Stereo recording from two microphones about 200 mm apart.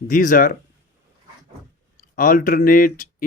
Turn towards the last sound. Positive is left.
turn(degrees=45)  # may be behind; listen again after turning